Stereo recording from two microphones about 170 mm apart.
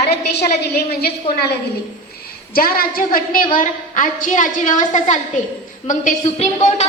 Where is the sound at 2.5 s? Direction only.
60° left (ahead or behind).